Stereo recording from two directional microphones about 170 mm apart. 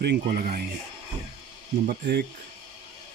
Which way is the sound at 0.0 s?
65° right (ahead or behind).